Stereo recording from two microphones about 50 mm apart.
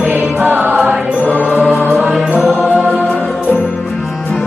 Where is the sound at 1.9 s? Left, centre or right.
Right.